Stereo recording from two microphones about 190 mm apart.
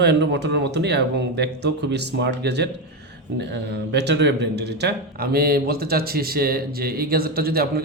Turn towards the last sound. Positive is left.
turn(degrees=-55)  # may be behind; listen again after turning